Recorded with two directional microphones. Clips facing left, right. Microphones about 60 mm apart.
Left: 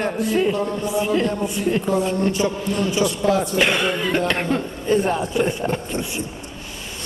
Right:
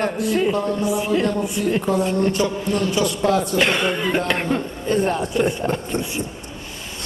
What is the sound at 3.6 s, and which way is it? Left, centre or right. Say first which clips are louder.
A man's voice: even; centre.